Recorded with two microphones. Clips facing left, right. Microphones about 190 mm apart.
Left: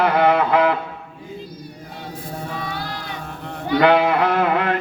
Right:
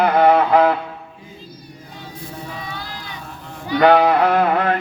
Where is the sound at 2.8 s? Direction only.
55° left (ahead or behind).